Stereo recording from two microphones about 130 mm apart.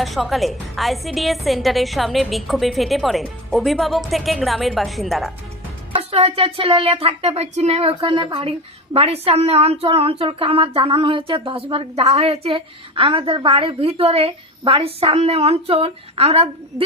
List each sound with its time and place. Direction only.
0.0 s a woman's voice: centre (ahead or behind)
6.0 s speech: 50° right (ahead or behind)